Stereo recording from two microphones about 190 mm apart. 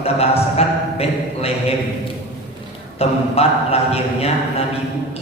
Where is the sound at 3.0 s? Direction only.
30° left (ahead or behind).